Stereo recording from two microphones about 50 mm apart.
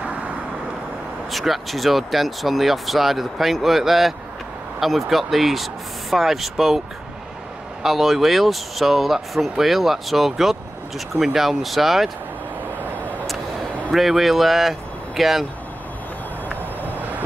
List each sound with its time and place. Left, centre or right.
1.3 s speech: centre
7.8 s speech: centre
13.9 s speech: centre
16.4 s vehicle: left